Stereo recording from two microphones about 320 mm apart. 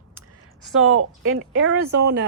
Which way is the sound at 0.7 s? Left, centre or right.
Right.